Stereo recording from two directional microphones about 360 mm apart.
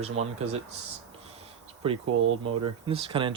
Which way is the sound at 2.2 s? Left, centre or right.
Right.